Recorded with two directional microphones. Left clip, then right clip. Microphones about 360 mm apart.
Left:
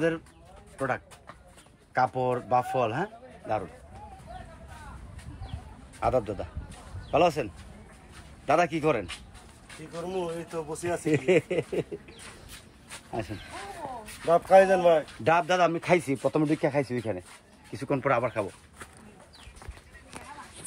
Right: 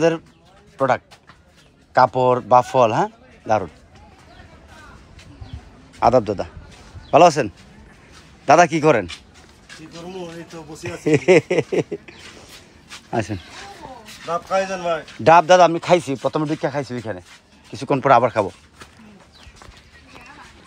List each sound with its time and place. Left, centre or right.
0.7 s a man's voice: centre
5.9 s a man's voice: centre
11.1 s a man's voice: centre
14.2 s speech: left
15.2 s a man's voice: centre